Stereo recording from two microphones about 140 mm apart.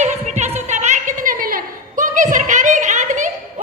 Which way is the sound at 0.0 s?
55° right (ahead or behind).